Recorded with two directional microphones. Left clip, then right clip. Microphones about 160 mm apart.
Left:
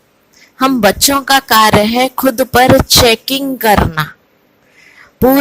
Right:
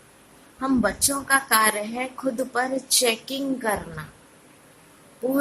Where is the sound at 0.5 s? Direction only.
55° left (ahead or behind).